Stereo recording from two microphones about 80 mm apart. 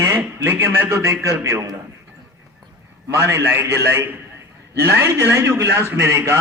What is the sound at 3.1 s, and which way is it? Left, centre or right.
A man's voice, right.